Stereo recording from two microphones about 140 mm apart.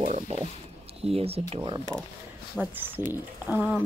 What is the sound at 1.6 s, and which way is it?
Speech, 35° right (ahead or behind).